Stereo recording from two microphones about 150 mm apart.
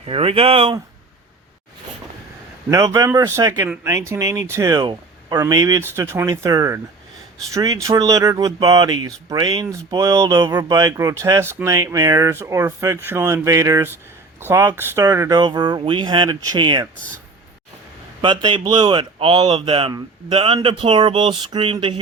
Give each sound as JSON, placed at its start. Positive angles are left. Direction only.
{"t": 0.0, "sound": "speech", "side_deg": -40}
{"t": 2.6, "sound": "speech", "side_deg": -25}
{"t": 15.4, "sound": "speech", "side_deg": -30}
{"t": 18.2, "sound": "speech", "side_deg": -35}